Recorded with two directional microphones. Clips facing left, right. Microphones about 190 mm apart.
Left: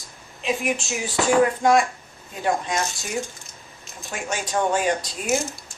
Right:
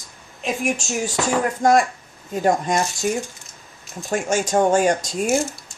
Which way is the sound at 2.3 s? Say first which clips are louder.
Right 5 dB; 40° right (ahead or behind).